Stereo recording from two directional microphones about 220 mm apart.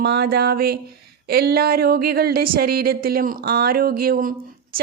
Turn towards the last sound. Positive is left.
turn(degrees=-40)  # may be behind; listen again after turning